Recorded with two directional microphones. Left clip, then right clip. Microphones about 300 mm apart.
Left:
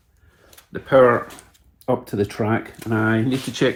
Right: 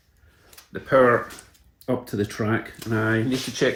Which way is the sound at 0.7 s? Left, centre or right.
Centre.